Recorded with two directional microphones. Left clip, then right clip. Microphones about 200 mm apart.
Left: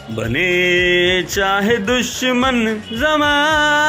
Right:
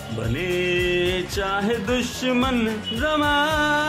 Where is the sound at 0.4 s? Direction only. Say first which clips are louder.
Left 9 dB; 30° left (ahead or behind).